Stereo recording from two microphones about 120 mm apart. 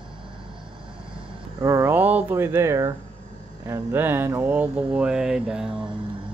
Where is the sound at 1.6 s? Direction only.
25° right (ahead or behind).